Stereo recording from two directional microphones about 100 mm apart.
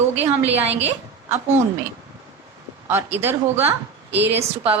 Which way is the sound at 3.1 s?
25° right (ahead or behind).